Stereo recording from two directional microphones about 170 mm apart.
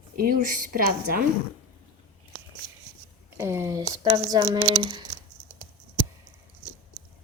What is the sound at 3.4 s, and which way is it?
A woman's voice, 15° right (ahead or behind).